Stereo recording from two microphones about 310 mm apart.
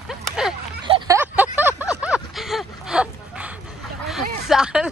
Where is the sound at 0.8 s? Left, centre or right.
Centre.